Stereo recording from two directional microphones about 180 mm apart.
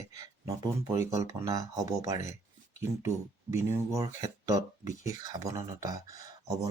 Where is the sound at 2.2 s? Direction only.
40° left (ahead or behind).